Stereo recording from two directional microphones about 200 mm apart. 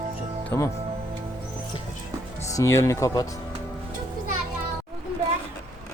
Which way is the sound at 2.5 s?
15° left (ahead or behind).